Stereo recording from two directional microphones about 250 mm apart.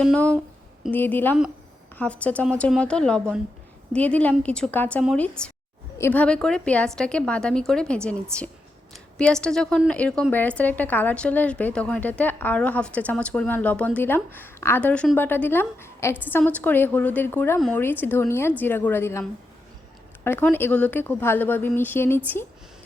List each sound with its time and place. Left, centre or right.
0.0 s a woman's voice: centre